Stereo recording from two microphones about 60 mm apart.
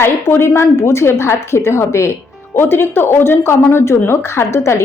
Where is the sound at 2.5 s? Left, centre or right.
Left.